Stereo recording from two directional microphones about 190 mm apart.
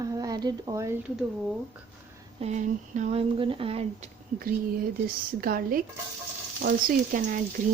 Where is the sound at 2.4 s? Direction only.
40° right (ahead or behind).